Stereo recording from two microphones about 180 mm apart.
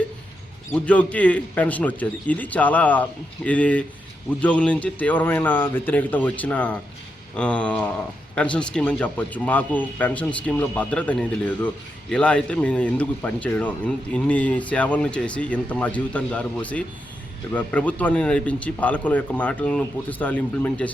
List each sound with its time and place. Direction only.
0.7 s speech: 10° left (ahead or behind)